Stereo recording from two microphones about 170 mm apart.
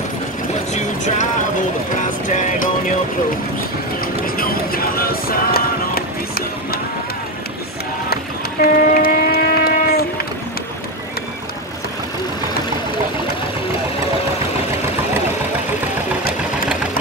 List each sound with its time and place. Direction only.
0.7 s speech: 45° left (ahead or behind)
4.0 s a sound: 60° left (ahead or behind)
8.1 s train: 65° left (ahead or behind)